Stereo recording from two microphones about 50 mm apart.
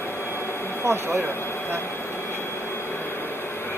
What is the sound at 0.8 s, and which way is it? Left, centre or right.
Speech, right.